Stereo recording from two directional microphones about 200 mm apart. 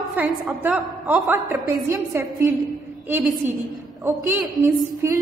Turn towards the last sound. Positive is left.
turn(degrees=-15)  # may be behind; listen again after turning